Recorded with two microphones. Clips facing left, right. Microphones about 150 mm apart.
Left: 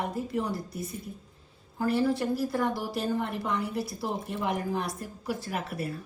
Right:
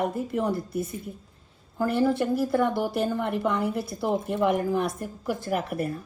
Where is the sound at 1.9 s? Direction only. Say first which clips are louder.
Right 2 dB; 55° right (ahead or behind).